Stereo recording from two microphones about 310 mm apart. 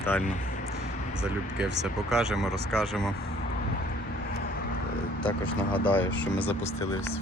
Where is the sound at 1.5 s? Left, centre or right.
Centre.